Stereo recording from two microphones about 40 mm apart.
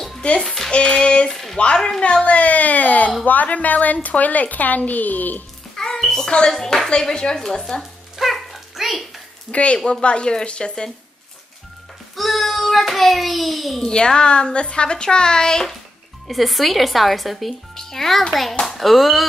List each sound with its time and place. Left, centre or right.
0.2 s a woman's voice: left
1.3 s speech: centre
2.2 s speech: left
6.0 s a child's voice: centre
7.3 s speech: centre
8.2 s dog: centre
9.5 s a woman's voice: left
12.2 s a child's voice: centre
13.8 s a woman's voice: centre
16.3 s speech: centre